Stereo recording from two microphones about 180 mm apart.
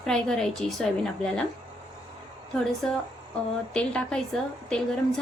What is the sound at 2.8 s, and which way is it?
Speech, 5° left (ahead or behind).